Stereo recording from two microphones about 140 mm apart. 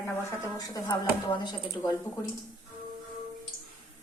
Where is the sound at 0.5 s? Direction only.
25° left (ahead or behind).